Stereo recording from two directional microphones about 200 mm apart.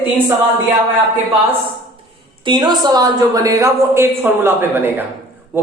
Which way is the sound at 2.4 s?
25° right (ahead or behind).